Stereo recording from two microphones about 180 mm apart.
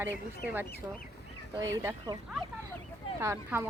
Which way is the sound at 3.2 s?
15° right (ahead or behind).